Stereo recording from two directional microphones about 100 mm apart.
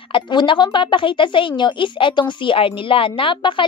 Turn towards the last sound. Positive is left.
turn(degrees=55)  # may be behind; listen again after turning